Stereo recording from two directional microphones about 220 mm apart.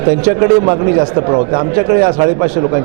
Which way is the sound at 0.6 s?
25° right (ahead or behind).